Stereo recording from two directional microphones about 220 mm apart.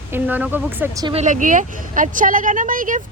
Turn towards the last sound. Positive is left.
turn(degrees=-40)  # may be behind; listen again after turning